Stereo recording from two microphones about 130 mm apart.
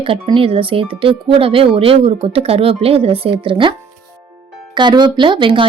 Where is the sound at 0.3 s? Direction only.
45° right (ahead or behind).